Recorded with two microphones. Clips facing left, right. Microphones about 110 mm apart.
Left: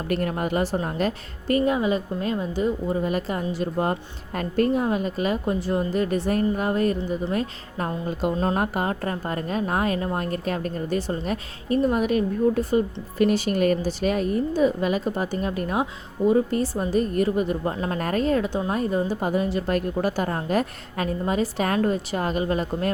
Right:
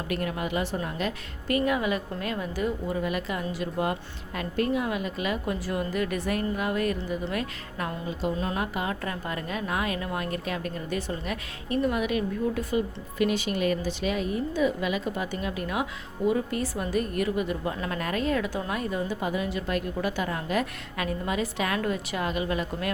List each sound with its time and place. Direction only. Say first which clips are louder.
0.1 s a woman's voice: left 5 dB; 45° left (ahead or behind)
8.0 s a woman's voice: left 6 dB; 50° left (ahead or behind)